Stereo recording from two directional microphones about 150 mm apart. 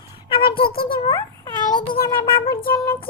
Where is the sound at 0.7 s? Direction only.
85° left.